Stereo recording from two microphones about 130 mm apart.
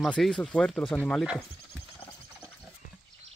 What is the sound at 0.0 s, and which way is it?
Speech, 5° left (ahead or behind).